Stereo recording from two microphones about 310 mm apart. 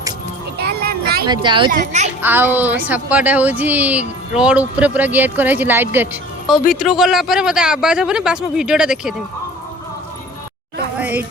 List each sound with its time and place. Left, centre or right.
0.6 s music: right
1.3 s a child's voice: centre
2.2 s speech: centre
10.9 s a sound: centre